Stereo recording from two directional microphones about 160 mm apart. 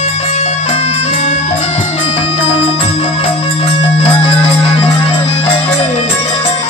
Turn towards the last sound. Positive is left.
turn(degrees=35)  # may be behind; listen again after turning